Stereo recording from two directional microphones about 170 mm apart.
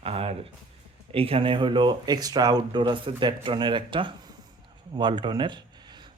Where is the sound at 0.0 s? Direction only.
35° right (ahead or behind).